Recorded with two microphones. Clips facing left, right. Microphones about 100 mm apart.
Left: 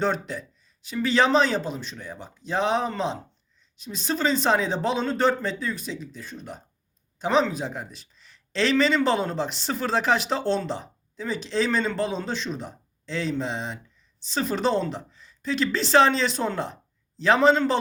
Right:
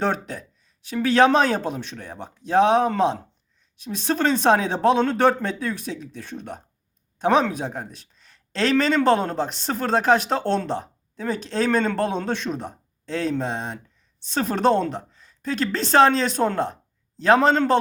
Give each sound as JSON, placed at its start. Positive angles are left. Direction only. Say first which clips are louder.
{"t": 0.0, "sound": "speech", "louder": "right 1 dB", "side_deg": -50}